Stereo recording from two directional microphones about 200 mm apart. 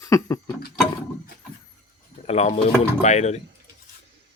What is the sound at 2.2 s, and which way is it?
Speech, 35° left (ahead or behind).